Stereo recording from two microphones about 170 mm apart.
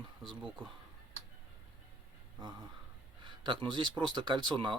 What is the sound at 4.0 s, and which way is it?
Speech, 25° right (ahead or behind).